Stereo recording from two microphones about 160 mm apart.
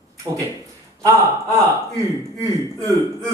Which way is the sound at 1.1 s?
20° right (ahead or behind).